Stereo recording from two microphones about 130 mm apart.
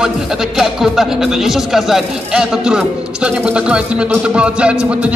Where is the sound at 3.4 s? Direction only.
10° right (ahead or behind).